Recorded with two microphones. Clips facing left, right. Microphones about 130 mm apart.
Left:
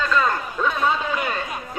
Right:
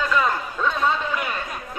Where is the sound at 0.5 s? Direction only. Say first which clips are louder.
Left 1 dB; 10° left (ahead or behind).